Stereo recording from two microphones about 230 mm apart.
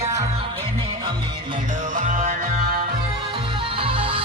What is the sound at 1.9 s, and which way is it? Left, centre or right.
Music, right.